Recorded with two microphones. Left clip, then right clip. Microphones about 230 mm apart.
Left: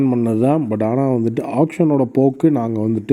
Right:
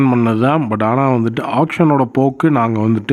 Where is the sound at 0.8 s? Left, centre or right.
Centre.